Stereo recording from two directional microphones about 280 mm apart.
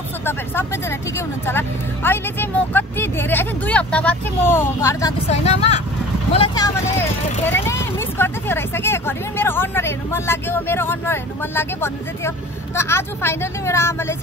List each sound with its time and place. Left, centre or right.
0.2 s speech: centre
5.3 s speech: left